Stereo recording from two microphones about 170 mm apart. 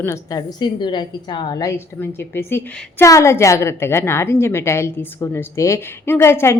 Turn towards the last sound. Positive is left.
turn(degrees=15)  # may be behind; listen again after turning